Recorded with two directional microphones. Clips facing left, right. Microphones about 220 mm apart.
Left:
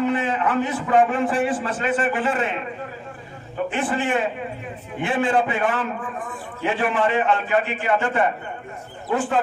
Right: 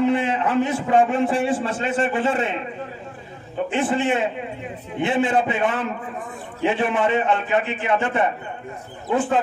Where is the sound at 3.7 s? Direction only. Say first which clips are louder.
Right 3 dB; 25° right (ahead or behind).